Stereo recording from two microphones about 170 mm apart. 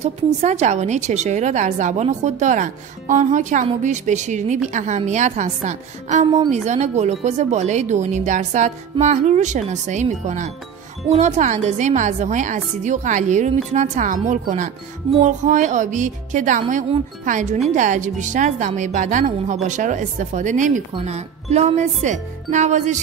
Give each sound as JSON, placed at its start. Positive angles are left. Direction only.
{"t": 0.0, "sound": "a woman's voice", "side_deg": -40}